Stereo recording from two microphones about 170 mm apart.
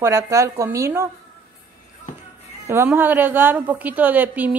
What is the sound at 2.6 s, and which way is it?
A woman's voice, 15° right (ahead or behind).